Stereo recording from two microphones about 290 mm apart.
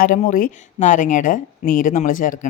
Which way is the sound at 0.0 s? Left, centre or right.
Left.